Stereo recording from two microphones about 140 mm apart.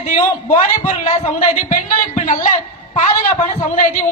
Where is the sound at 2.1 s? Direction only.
75° left (ahead or behind).